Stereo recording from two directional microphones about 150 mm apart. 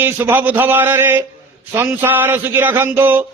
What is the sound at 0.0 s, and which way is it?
A man's voice, 15° right (ahead or behind).